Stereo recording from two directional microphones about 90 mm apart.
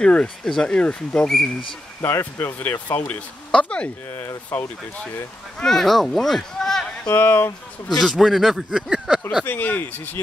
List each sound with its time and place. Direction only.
0.0 s speech: 10° left (ahead or behind)
2.0 s speech: 25° left (ahead or behind)
4.1 s speech: 25° left (ahead or behind)
5.6 s speech: 5° left (ahead or behind)
7.1 s speech: 25° left (ahead or behind)
8.0 s speech: centre (ahead or behind)
9.4 s speech: 20° left (ahead or behind)